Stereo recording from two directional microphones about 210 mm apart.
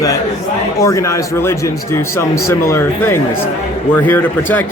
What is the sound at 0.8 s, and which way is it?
A man's voice, 15° left (ahead or behind).